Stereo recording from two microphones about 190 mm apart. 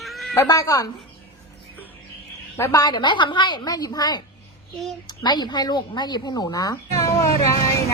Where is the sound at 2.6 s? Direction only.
15° left (ahead or behind).